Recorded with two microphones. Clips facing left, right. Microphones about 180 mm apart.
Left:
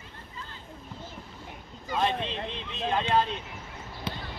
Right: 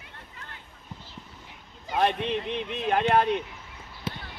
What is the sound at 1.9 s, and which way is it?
Speech, 60° right (ahead or behind).